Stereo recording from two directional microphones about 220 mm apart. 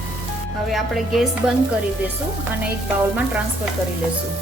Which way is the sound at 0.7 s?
Centre (ahead or behind).